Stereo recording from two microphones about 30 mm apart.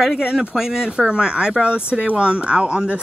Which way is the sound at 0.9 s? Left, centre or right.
Right.